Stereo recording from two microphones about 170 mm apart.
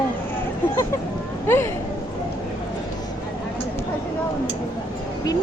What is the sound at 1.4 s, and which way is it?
Speech, 15° left (ahead or behind).